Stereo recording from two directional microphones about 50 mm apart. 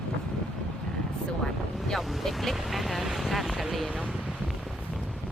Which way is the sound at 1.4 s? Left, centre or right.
Centre.